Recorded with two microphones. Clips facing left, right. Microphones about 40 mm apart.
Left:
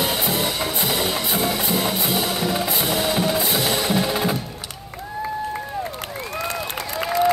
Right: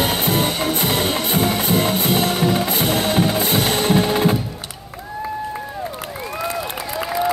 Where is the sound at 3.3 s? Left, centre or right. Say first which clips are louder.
Right 3 dB; right.